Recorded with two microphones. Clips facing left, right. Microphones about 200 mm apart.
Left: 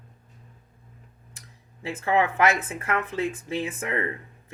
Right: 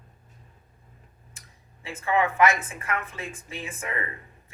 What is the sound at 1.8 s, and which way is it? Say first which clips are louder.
Speech: left 2 dB; 65° left (ahead or behind).